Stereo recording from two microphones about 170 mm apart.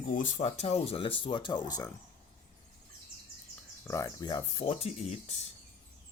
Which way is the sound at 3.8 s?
20° left (ahead or behind).